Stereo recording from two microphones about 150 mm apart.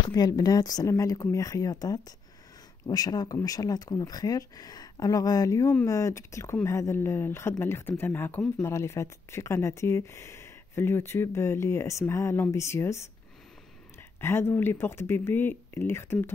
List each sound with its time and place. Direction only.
0.1 s speech: 25° left (ahead or behind)
14.2 s speech: 15° left (ahead or behind)